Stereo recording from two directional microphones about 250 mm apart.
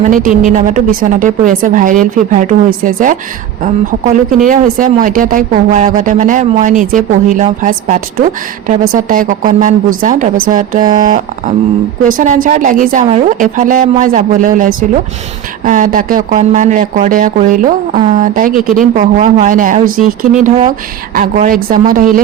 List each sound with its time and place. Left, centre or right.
0.0 s speech: right
21.2 s speech: right